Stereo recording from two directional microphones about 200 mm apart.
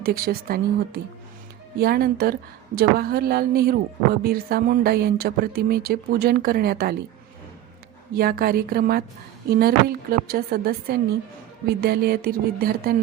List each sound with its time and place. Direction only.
0.0 s a woman's voice: 50° right (ahead or behind)
8.1 s a woman's voice: 50° right (ahead or behind)